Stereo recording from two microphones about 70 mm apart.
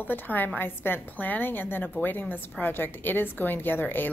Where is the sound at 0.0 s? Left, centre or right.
Left.